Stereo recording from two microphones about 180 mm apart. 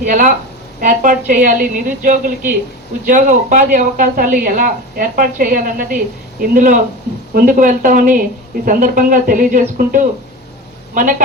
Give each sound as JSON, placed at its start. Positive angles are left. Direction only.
{"t": 0.0, "sound": "a woman's voice", "side_deg": -45}